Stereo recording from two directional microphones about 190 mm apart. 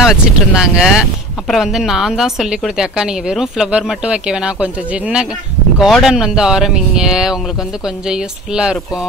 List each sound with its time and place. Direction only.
0.0 s a woman's voice: centre (ahead or behind)